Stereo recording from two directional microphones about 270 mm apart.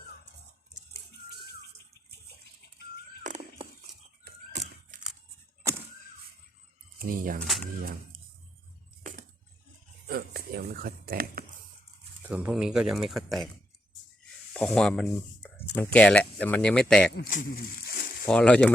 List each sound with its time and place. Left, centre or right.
3.2 s a sound: right
7.0 s speech: right
7.4 s speech: centre
7.8 s speech: right
10.1 s speech: right
12.3 s speech: centre
14.5 s speech: centre
17.2 s speech: left
18.3 s speech: centre